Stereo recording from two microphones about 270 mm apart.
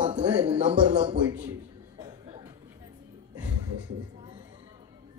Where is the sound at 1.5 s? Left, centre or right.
Centre.